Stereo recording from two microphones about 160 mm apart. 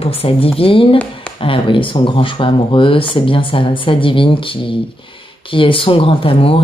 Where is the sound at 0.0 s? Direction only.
35° left (ahead or behind).